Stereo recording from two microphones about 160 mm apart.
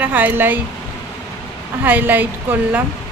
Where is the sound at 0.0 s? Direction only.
10° right (ahead or behind).